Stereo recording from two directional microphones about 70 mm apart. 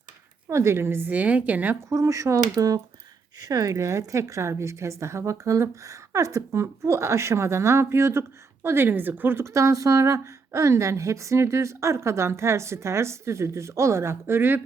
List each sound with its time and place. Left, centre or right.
0.5 s speech: right
1.1 s a woman's voice: right
1.9 s a woman's voice: right
9.5 s a woman's voice: right